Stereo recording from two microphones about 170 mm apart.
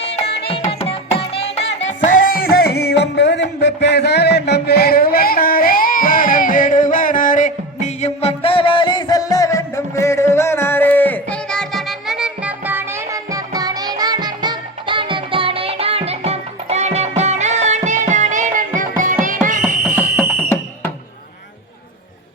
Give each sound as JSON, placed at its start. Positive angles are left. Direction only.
{"t": 0.0, "sound": "music", "side_deg": 35}
{"t": 19.6, "sound": "fire alarm", "side_deg": -10}